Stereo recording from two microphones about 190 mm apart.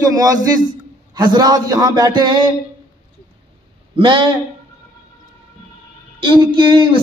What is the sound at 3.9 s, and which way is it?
Speech, 25° right (ahead or behind).